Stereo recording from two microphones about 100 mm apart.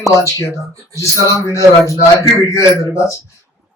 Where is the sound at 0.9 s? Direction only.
30° left (ahead or behind).